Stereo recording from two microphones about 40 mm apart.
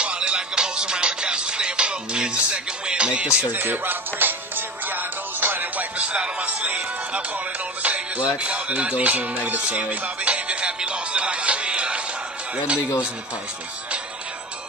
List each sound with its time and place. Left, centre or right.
0.0 s music: right
3.5 s music: right
5.9 s music: right